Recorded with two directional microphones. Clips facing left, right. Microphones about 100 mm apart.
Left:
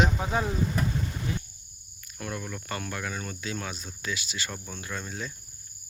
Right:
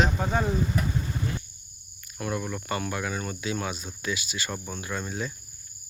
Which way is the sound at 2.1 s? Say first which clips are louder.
Right 5 dB; 5° right (ahead or behind).